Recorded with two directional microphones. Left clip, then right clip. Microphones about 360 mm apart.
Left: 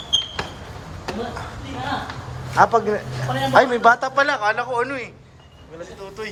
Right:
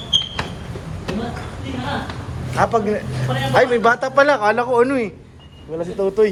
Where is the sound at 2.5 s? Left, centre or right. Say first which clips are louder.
Left 2 dB; centre.